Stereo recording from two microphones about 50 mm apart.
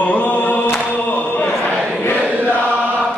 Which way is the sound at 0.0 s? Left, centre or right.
Left.